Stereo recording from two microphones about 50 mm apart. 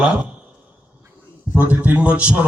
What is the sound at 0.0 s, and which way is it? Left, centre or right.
Speech, right.